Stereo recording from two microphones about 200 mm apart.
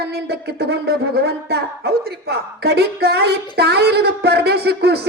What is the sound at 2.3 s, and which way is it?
Speech, 55° right (ahead or behind).